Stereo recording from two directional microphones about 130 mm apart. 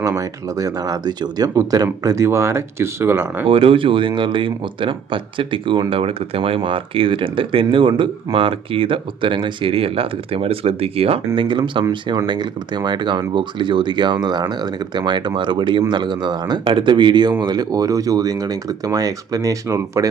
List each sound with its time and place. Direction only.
0.0 s speech: 25° right (ahead or behind)
3.4 s speech: 45° right (ahead or behind); by 20.1 s 25° right (ahead or behind)